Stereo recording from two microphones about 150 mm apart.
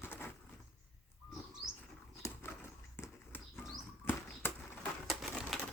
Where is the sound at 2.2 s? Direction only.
15° left (ahead or behind).